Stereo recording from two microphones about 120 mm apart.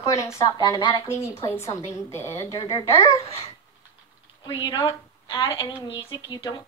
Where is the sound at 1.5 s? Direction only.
25° left (ahead or behind).